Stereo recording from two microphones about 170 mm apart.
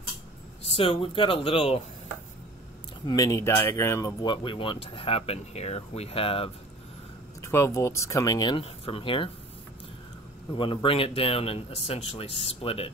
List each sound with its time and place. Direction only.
0.7 s speech: 30° left (ahead or behind)
3.1 s speech: 20° left (ahead or behind)
7.4 s speech: 15° left (ahead or behind)
10.5 s speech: 30° left (ahead or behind)